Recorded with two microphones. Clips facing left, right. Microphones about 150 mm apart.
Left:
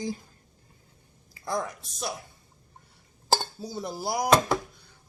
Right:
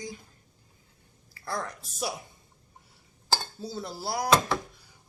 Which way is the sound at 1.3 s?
15° left (ahead or behind).